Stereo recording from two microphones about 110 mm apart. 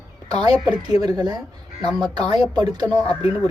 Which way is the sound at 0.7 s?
40° right (ahead or behind).